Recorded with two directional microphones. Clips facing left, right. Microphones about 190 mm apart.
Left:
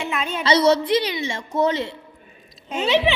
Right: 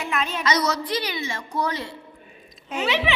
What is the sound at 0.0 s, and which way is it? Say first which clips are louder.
A woman's voice: left 1 dB; 30° left (ahead or behind).